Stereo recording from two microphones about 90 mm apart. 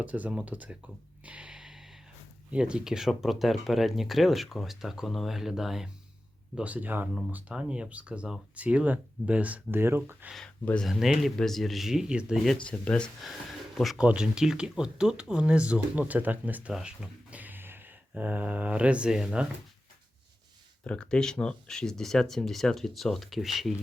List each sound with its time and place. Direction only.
0.0 s speech: 15° right (ahead or behind)
1.2 s music: 15° right (ahead or behind)
2.5 s speech: 10° right (ahead or behind)
6.6 s speech: 15° right (ahead or behind)
10.8 s speech: centre (ahead or behind)
12.6 s speech: 15° left (ahead or behind)
13.7 s speech: centre (ahead or behind)
20.8 s speech: 10° left (ahead or behind)